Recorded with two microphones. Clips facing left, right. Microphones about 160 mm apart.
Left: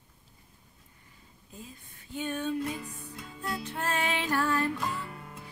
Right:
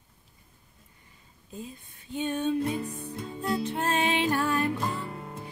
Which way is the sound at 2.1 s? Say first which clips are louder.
Right 4 dB; 20° right (ahead or behind).